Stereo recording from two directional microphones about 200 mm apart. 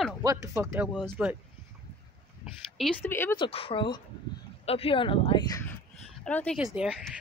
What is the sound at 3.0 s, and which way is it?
Speech, 10° left (ahead or behind).